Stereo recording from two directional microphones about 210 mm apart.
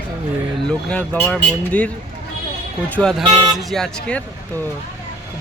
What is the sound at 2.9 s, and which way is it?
Speech, centre (ahead or behind).